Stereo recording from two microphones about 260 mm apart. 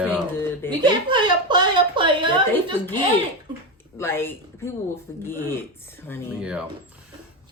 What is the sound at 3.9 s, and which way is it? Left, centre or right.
Speech, centre.